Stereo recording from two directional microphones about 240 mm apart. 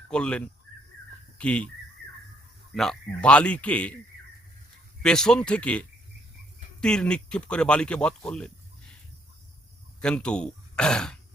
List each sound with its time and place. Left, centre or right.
0.1 s speech: centre
2.0 s music: right
2.7 s speech: centre
5.0 s speech: centre
6.8 s speech: centre
10.0 s speech: centre